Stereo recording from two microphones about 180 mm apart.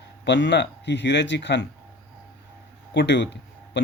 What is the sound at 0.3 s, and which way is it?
Speech, 75° left (ahead or behind).